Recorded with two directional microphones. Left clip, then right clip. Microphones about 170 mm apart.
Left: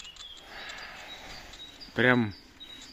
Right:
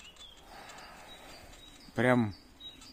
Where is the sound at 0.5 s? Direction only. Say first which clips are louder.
Left 8 dB; 5° left (ahead or behind).